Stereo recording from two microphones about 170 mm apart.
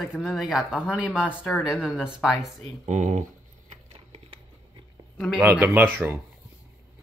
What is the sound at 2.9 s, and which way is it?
Speech, 45° right (ahead or behind).